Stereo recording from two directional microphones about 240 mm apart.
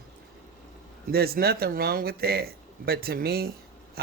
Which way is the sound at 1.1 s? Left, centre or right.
Right.